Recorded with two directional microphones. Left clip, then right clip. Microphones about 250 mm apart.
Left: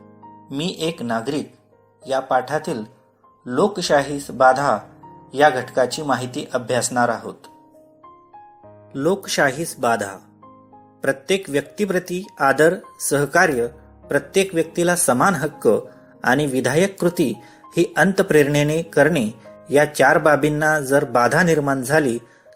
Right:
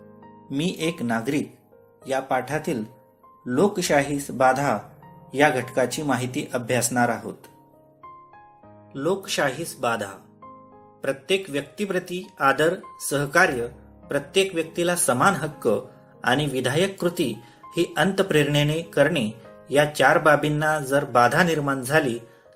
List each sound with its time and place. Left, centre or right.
0.9 s speech: centre
8.9 s speech: left